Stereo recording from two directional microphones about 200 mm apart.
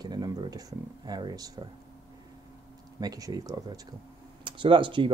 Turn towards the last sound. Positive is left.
turn(degrees=-25)  # may be behind; listen again after turning